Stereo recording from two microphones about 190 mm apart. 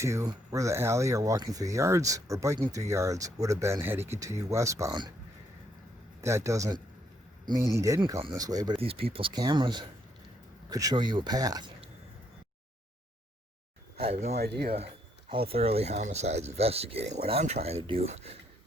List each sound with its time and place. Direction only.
0.0 s speech: 15° right (ahead or behind)
6.2 s speech: 15° right (ahead or behind)
14.0 s speech: 35° right (ahead or behind)
14.3 s speech: 55° right (ahead or behind)
15.3 s speech: 30° right (ahead or behind)